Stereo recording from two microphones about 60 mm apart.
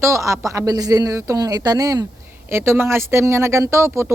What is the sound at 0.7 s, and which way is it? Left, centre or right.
Speech, right.